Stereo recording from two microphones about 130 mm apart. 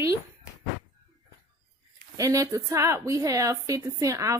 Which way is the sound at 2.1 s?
25° right (ahead or behind).